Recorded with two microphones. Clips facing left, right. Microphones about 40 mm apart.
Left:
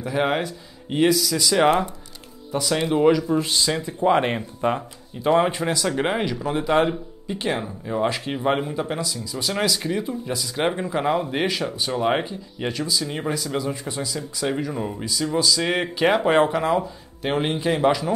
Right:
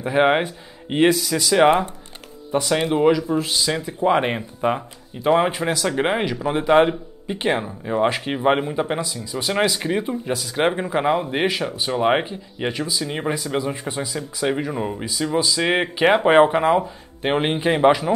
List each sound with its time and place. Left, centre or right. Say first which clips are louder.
0.0 s speech: right 5 dB; right